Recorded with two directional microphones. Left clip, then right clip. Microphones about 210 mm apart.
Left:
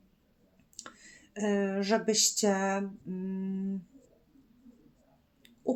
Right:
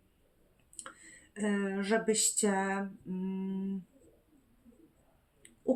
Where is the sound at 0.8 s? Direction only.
30° left (ahead or behind).